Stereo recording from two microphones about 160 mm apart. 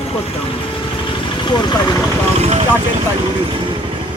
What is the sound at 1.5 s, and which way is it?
Speech, 30° left (ahead or behind).